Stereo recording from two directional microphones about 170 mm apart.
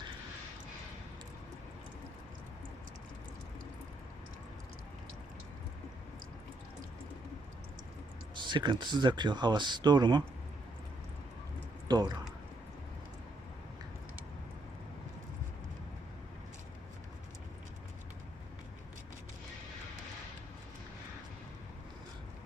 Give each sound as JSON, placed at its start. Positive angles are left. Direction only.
{"t": 8.4, "sound": "speech", "side_deg": -25}
{"t": 11.9, "sound": "speech", "side_deg": -25}